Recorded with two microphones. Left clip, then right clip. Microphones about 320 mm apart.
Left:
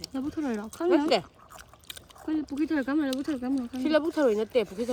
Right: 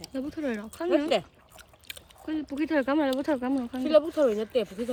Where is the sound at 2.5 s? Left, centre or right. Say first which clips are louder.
Right 4 dB; centre.